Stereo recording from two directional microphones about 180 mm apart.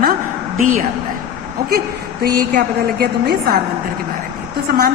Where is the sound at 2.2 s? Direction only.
55° right (ahead or behind).